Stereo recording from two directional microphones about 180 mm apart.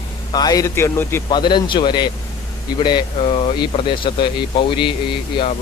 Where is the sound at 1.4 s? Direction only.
25° left (ahead or behind).